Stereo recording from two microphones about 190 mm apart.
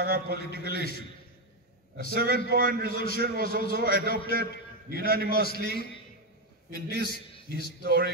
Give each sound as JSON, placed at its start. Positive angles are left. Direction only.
{"t": 0.0, "sound": "a man's voice", "side_deg": -55}
{"t": 2.1, "sound": "a man's voice", "side_deg": -55}